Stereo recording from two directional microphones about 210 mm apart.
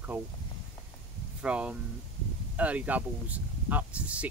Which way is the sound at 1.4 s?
5° right (ahead or behind).